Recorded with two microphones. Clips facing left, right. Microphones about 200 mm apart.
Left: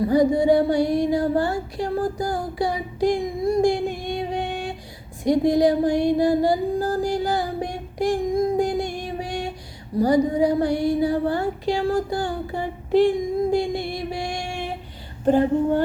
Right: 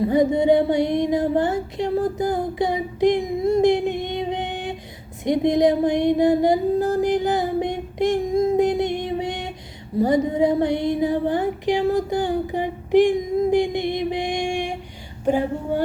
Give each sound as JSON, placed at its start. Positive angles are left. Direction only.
{"t": 0.0, "sound": "music", "side_deg": -20}
{"t": 5.2, "sound": "a sound", "side_deg": -20}
{"t": 10.0, "sound": "child singing", "side_deg": -25}